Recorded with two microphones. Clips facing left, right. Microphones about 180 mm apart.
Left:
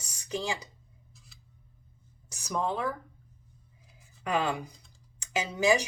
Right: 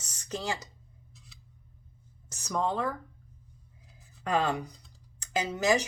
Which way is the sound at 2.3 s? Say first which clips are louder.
Right 1 dB; 10° left (ahead or behind).